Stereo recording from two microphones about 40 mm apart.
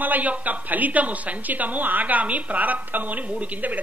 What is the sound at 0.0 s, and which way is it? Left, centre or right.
A woman's voice, right.